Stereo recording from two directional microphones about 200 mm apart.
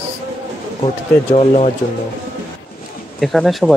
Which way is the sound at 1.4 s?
30° left (ahead or behind).